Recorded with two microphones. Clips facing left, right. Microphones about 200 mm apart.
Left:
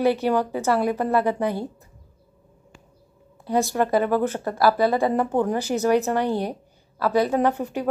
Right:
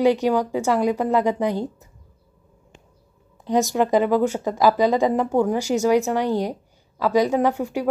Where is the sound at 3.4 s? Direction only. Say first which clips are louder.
Right 2 dB; 15° right (ahead or behind).